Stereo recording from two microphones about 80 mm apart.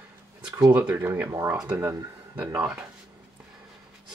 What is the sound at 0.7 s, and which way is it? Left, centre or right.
Speech, right.